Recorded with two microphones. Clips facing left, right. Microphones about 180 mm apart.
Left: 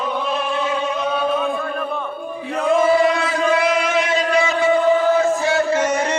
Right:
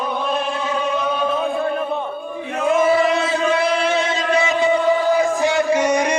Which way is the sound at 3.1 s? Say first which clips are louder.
Even; 25° right (ahead or behind).